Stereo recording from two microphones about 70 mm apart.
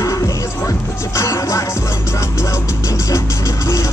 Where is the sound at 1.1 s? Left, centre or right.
Left.